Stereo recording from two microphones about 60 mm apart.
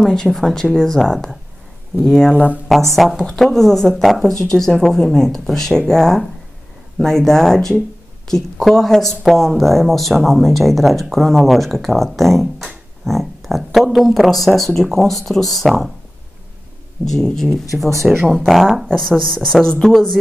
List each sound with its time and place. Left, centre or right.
0.0 s speech: centre
2.3 s speech: right
3.0 s speech: centre
17.0 s speech: centre
18.0 s speech: centre